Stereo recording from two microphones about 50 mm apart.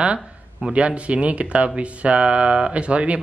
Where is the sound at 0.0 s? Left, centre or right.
Centre.